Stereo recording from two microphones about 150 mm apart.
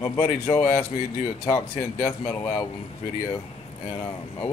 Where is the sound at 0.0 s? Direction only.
25° left (ahead or behind).